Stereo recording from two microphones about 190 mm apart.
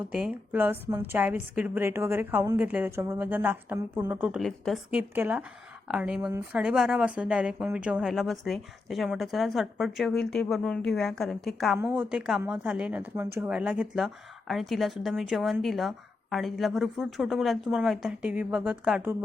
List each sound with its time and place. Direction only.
0.1 s a woman's voice: 5° right (ahead or behind)